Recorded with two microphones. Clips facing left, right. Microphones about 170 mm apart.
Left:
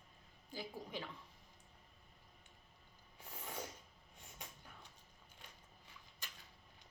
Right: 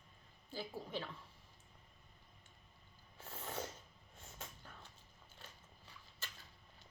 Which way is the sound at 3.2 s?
10° left (ahead or behind).